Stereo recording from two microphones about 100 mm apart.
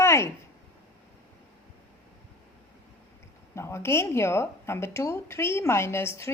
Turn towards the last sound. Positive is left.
turn(degrees=25)  # may be behind; listen again after turning